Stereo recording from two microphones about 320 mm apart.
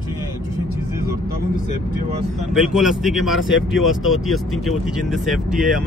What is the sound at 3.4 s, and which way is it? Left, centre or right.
Speech, left.